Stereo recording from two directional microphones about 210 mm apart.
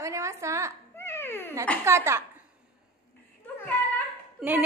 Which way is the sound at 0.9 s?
10° left (ahead or behind).